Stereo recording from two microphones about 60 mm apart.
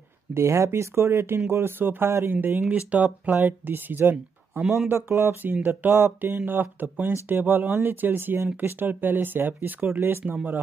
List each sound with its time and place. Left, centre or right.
0.3 s speech: right
2.6 s speech: right
3.3 s speech: right
5.4 s speech: right